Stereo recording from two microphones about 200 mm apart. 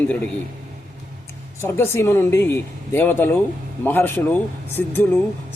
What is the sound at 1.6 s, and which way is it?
A man's voice, 10° left (ahead or behind).